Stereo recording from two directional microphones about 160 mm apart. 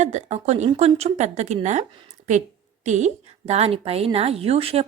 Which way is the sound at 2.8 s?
50° right (ahead or behind).